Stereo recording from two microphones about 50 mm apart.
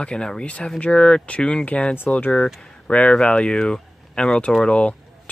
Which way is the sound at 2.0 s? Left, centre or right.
Left.